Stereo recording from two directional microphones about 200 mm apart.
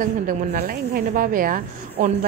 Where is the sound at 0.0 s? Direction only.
45° right (ahead or behind).